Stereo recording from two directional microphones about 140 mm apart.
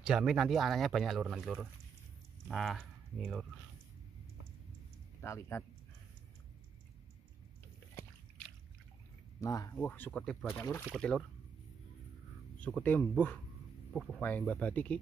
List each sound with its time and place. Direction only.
0.0 s speech: 5° right (ahead or behind)
5.2 s speech: 20° left (ahead or behind)
9.4 s speech: 25° left (ahead or behind)
9.8 s speech: 10° left (ahead or behind)
11.0 s speech: 5° left (ahead or behind)
12.5 s speech: 10° left (ahead or behind)
14.2 s speech: 10° left (ahead or behind)